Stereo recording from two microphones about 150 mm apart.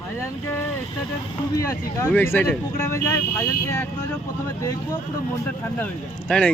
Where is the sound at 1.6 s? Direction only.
20° left (ahead or behind).